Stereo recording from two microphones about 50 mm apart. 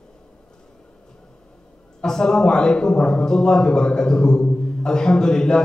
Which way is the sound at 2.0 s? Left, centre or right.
Centre.